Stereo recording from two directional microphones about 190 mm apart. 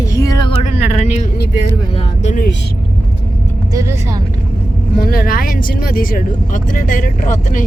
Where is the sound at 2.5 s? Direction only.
65° left (ahead or behind).